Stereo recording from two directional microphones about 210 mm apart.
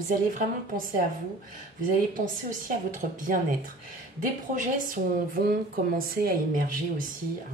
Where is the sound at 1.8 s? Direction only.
40° right (ahead or behind).